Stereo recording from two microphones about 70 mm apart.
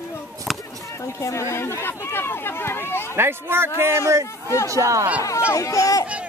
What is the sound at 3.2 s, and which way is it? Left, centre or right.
A woman's voice, right.